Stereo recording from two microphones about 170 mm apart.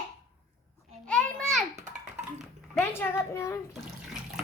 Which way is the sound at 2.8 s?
15° left (ahead or behind).